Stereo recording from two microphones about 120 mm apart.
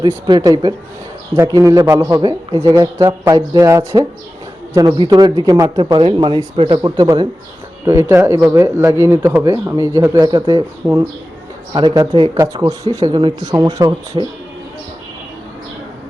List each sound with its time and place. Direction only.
0.3 s speech: 30° right (ahead or behind)
5.8 s speech: 45° right (ahead or behind)
7.9 s speech: 20° right (ahead or behind); by 10.6 s 40° right (ahead or behind)
10.8 s speech: 10° right (ahead or behind)
11.7 s speech: 35° right (ahead or behind)